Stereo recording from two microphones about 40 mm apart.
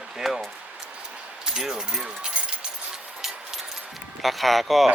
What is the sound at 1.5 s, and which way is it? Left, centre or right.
Speech, centre.